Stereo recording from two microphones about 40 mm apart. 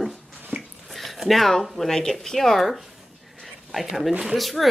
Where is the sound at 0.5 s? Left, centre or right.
Right.